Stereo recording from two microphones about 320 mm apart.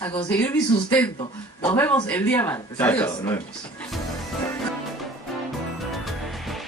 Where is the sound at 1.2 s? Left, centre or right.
Centre.